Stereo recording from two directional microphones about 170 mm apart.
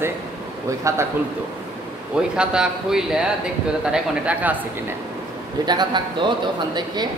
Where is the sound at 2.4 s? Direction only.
5° right (ahead or behind).